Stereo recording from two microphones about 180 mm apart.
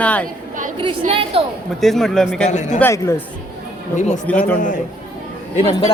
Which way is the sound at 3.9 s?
40° left (ahead or behind).